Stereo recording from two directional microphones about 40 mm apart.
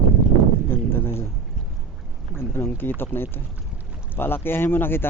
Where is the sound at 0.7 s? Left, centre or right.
Left.